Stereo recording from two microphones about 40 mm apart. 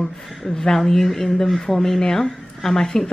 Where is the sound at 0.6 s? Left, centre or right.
Centre.